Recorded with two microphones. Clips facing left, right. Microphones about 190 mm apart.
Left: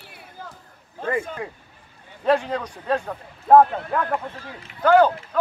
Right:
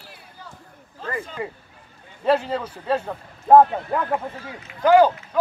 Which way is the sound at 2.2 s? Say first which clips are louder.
Even; 5° right (ahead or behind).